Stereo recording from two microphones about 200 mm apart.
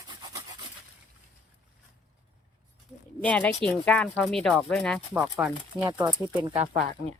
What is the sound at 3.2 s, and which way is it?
Speech, 5° left (ahead or behind).